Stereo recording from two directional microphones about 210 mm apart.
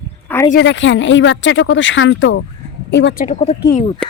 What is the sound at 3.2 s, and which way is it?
Speech, 30° left (ahead or behind).